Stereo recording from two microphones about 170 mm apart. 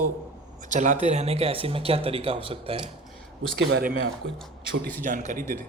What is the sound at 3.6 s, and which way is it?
Speech, 70° right (ahead or behind).